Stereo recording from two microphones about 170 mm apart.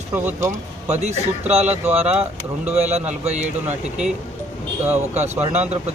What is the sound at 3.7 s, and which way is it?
Speech, 5° right (ahead or behind).